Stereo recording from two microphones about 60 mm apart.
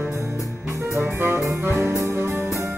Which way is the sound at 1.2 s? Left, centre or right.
Right.